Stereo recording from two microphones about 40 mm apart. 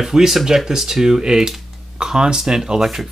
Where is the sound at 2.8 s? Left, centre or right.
Centre.